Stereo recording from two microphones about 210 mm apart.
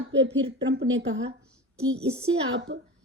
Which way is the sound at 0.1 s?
60° right (ahead or behind).